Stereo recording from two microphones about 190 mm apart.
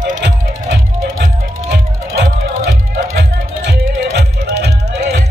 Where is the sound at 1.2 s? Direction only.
55° right (ahead or behind).